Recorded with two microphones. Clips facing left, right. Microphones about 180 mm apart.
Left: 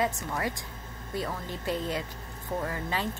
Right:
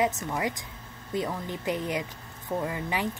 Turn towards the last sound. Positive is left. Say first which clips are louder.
# right 2 dB
turn(degrees=-15)  # may be behind; listen again after turning